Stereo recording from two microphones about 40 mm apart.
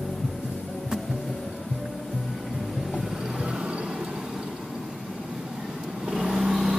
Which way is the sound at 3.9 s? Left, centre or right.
Centre.